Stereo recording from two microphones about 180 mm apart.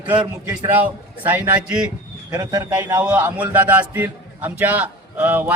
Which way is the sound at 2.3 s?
20° right (ahead or behind).